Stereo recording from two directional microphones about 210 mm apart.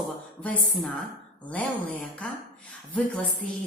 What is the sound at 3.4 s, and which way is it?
Speech, 5° left (ahead or behind).